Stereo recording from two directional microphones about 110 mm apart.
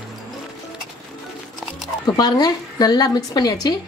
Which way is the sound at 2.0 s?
35° left (ahead or behind).